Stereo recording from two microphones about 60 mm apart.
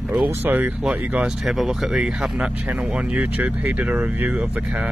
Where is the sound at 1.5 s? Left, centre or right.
Centre; by 4.9 s right.